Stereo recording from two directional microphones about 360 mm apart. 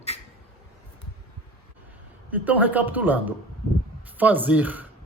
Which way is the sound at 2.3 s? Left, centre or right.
Centre.